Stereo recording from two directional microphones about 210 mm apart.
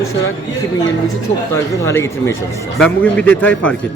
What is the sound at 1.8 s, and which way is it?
Speech, 10° left (ahead or behind).